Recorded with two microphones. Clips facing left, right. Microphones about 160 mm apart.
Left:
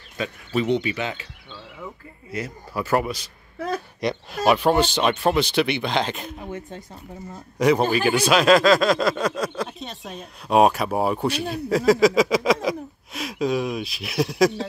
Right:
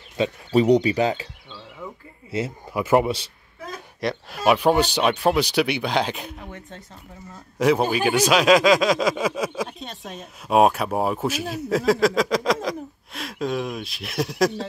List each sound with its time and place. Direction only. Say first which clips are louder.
0.2 s speech: right 5 dB; 35° right (ahead or behind)
2.3 s speech: right 3 dB; 20° right (ahead or behind)
3.5 s a sound: left 9 dB; 65° left (ahead or behind)
4.0 s speech: right 1 dB; centre (ahead or behind)